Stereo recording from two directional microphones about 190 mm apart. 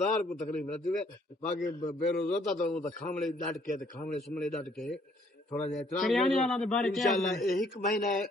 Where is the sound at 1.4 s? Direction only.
40° left (ahead or behind).